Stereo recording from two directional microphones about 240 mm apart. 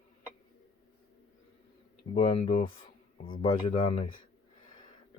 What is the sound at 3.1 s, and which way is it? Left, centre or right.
Speech, left.